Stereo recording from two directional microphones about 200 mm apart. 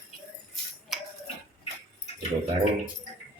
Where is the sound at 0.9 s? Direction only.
Centre (ahead or behind).